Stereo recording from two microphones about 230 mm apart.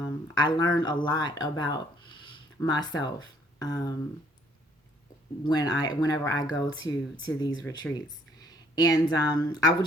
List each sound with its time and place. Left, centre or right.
0.0 s speech: centre
5.4 s speech: centre
7.9 s a sound: centre
9.1 s speech: centre